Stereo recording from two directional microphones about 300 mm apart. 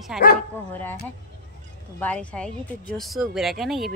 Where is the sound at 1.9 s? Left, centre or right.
Centre.